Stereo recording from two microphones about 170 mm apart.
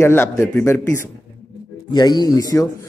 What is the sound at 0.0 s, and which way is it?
A man's voice, 15° left (ahead or behind).